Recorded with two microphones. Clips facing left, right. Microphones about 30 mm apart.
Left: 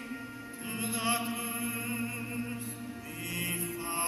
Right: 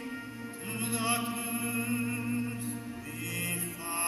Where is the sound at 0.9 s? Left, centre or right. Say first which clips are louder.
Even; left.